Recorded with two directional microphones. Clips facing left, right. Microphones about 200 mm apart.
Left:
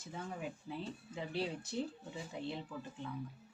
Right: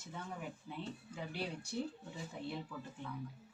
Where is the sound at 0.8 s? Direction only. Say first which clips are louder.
Right 1 dB; 30° left (ahead or behind).